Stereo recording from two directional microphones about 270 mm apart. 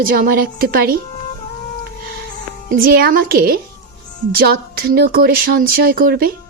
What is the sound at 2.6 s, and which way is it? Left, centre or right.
A woman's voice, right.